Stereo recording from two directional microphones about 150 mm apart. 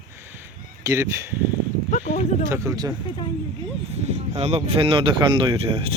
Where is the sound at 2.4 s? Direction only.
20° right (ahead or behind).